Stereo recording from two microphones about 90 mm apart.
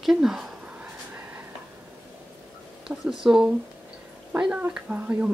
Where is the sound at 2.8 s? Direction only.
5° right (ahead or behind).